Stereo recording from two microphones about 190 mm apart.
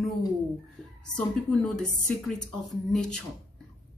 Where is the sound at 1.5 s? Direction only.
5° left (ahead or behind).